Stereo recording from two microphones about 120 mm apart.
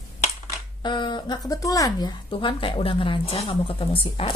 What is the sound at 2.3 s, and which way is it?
A woman's voice, 45° left (ahead or behind).